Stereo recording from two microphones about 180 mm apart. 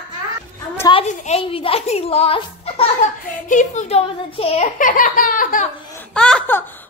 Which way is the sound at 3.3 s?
45° left (ahead or behind).